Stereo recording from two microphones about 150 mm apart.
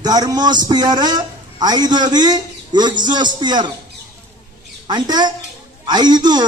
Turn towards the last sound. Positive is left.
turn(degrees=-30)  # may be behind; listen again after turning